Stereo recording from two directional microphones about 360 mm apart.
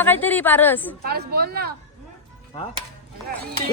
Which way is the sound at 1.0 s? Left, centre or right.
Right.